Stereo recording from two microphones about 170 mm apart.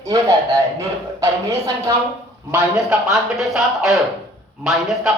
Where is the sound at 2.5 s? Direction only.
5° right (ahead or behind).